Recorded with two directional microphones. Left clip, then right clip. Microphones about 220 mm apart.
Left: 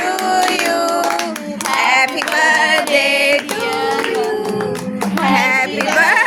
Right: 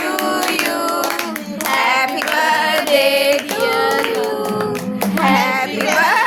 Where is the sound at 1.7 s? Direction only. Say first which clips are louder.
Left 2 dB; 5° right (ahead or behind).